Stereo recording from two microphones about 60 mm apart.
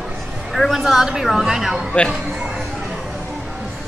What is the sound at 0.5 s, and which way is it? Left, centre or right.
A woman's voice, centre.